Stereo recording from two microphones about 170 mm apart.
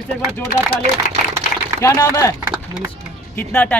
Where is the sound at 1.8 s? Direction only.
20° left (ahead or behind).